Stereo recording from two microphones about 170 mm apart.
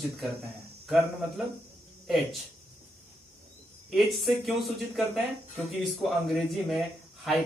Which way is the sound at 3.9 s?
Centre (ahead or behind).